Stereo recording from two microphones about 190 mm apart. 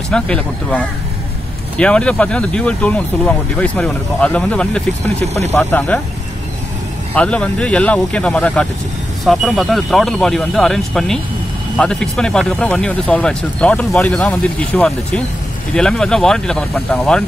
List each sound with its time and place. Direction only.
0.1 s speech: 5° left (ahead or behind)
5.2 s speech: 35° right (ahead or behind)
5.6 s speech: 5° left (ahead or behind)
7.2 s speech: 5° left (ahead or behind)